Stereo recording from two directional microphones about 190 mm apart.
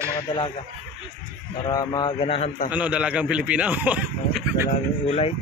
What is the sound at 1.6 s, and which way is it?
A man's voice, 20° left (ahead or behind).